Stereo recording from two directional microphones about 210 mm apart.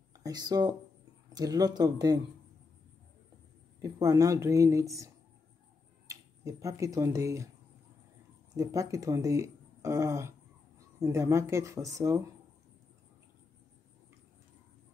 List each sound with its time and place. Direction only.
0.2 s speech: 20° right (ahead or behind)
3.8 s speech: 15° right (ahead or behind)
8.5 s speech: 15° right (ahead or behind)